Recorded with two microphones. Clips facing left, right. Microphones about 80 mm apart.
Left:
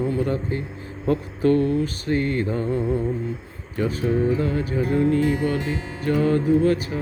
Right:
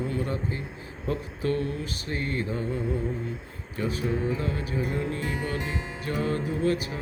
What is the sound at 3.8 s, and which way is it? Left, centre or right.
Music, left.